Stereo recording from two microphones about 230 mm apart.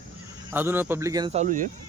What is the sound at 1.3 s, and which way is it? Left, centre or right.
Speech, right.